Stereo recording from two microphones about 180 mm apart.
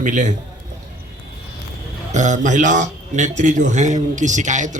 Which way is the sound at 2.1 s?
40° right (ahead or behind).